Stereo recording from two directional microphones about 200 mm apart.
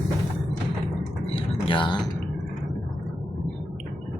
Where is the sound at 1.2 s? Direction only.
25° left (ahead or behind).